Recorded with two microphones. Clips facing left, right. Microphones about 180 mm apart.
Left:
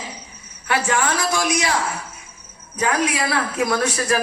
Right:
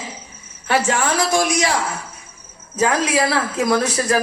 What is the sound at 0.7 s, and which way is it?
Speech, 25° right (ahead or behind).